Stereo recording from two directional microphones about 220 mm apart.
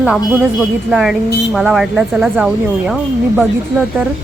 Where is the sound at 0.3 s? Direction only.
5° right (ahead or behind).